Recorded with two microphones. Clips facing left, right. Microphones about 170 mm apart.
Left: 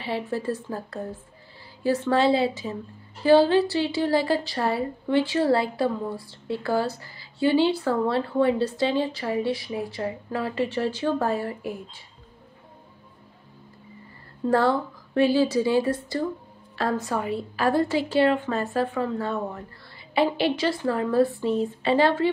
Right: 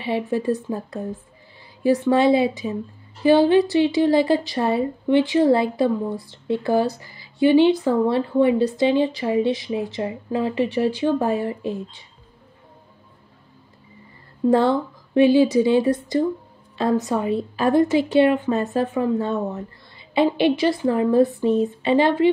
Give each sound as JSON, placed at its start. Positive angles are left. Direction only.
{"t": 0.0, "sound": "a woman's voice", "side_deg": -15}
{"t": 14.5, "sound": "a woman's voice", "side_deg": -20}